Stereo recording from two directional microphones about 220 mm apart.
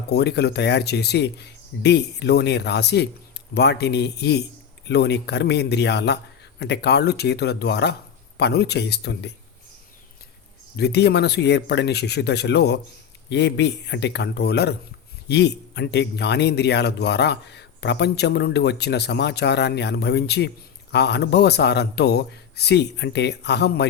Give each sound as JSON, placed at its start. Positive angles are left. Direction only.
{"t": 0.1, "sound": "speech", "side_deg": 50}
{"t": 10.8, "sound": "speech", "side_deg": 50}